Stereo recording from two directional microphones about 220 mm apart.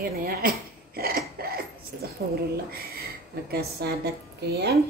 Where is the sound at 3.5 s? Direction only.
45° right (ahead or behind).